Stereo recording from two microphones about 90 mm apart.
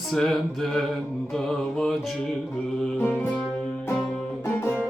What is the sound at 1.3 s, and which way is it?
Mantra, centre (ahead or behind).